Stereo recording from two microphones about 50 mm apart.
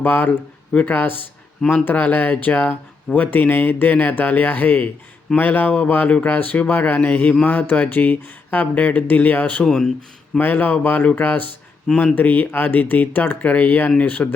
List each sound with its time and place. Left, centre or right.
0.0 s speech: left
9.6 s speech: centre
10.3 s speech: left